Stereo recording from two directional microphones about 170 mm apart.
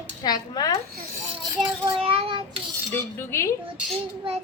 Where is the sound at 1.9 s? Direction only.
30° right (ahead or behind).